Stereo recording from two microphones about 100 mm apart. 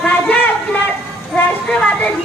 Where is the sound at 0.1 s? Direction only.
15° left (ahead or behind).